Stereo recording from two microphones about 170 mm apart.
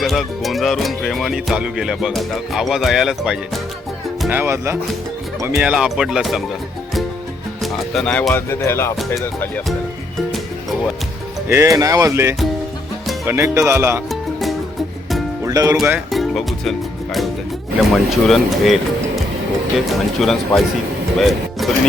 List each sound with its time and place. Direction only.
0.0 s music: centre (ahead or behind)
4.3 s speech: 15° right (ahead or behind)
5.5 s music: 5° right (ahead or behind)
7.6 s speech: 5° left (ahead or behind)
11.4 s speech: 15° right (ahead or behind)
14.1 s music: centre (ahead or behind)
15.4 s speech: 20° right (ahead or behind)
15.8 s speech: centre (ahead or behind)
17.9 s music: centre (ahead or behind)
19.9 s music: centre (ahead or behind)
21.2 s speech: centre (ahead or behind)